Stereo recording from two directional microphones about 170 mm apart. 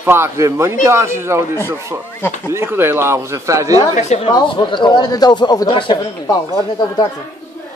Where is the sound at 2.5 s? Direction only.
15° right (ahead or behind).